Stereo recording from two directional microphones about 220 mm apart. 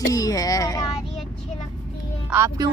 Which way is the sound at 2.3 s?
15° right (ahead or behind).